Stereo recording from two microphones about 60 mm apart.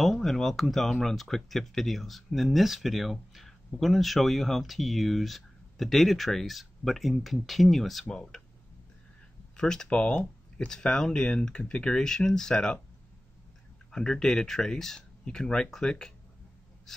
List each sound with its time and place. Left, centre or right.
0.0 s speech: centre
9.6 s speech: centre
13.9 s speech: centre